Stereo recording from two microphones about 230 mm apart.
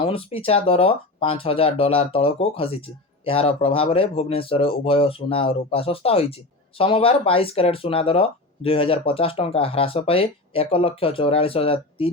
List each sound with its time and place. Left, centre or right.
0.0 s speech: left